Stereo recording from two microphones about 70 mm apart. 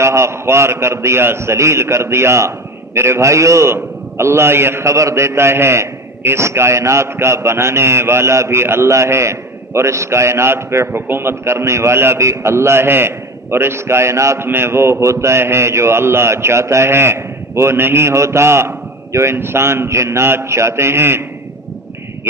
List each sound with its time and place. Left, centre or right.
0.0 s a man's voice: right